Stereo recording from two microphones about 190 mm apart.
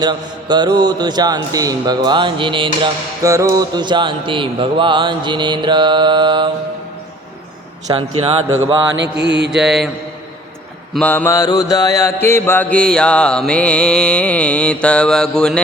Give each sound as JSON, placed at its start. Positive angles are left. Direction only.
{"t": 0.0, "sound": "a man's voice", "side_deg": -20}
{"t": 8.2, "sound": "a man's voice", "side_deg": -30}
{"t": 9.0, "sound": "mantra", "side_deg": -65}
{"t": 9.5, "sound": "mantra", "side_deg": 0}
{"t": 10.9, "sound": "mantra", "side_deg": 10}